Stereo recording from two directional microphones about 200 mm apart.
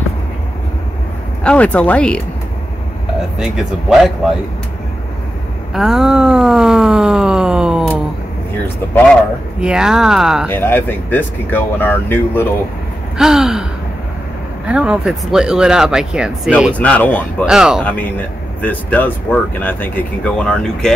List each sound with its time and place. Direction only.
1.4 s speech: 5° left (ahead or behind)
3.3 s speech: centre (ahead or behind)
5.7 s a sound: centre (ahead or behind)
9.6 s speech: 5° right (ahead or behind)
10.5 s speech: 10° left (ahead or behind)
13.2 s gasp: 5° right (ahead or behind)
14.7 s speech: 5° right (ahead or behind)
16.7 s speech: 5° left (ahead or behind)
17.5 s speech: 5° right (ahead or behind)
18.6 s speech: 10° left (ahead or behind)